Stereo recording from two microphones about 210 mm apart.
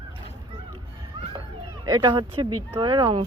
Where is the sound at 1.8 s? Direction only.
20° right (ahead or behind).